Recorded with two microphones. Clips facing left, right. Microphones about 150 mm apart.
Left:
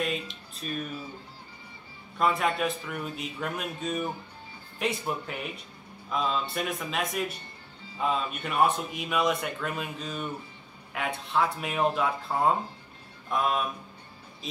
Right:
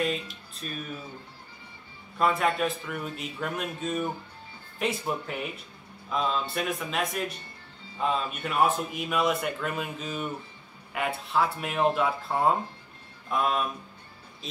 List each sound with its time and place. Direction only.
0.0 s a man's voice: centre (ahead or behind)
2.1 s a man's voice: centre (ahead or behind)